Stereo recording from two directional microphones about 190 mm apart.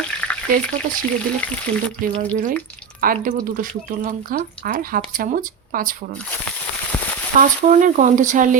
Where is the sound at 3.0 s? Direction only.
45° right (ahead or behind).